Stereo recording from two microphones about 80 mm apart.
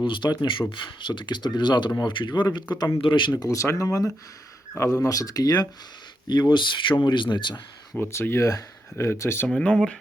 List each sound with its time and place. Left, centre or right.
0.0 s speech: left
2.0 s speech: left
3.1 s speech: left
3.3 s speech: left
6.2 s speech: left
8.1 s speech: left
9.5 s speech: centre